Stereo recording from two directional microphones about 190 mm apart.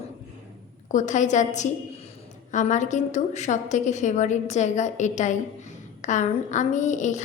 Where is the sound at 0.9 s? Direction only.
40° left (ahead or behind).